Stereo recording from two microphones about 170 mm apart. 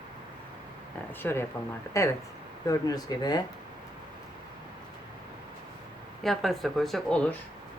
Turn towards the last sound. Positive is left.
turn(degrees=5)  # may be behind; listen again after turning